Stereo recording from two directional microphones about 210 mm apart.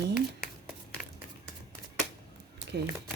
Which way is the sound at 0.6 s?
Centre (ahead or behind).